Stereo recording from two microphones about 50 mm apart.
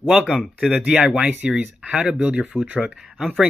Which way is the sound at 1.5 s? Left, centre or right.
Right.